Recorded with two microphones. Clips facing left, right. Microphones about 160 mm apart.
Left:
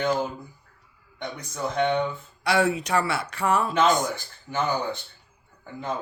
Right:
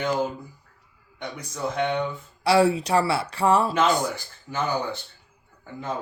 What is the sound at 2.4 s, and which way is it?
Speech, 30° right (ahead or behind).